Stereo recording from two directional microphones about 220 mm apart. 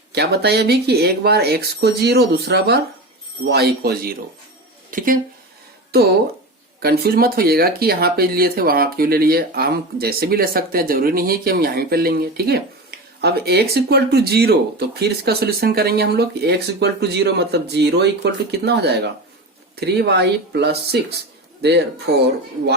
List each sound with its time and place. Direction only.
0.1 s speech: 45° right (ahead or behind)
6.8 s speech: 45° right (ahead or behind)